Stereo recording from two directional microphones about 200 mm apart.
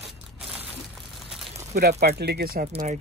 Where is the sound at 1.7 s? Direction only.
55° right (ahead or behind).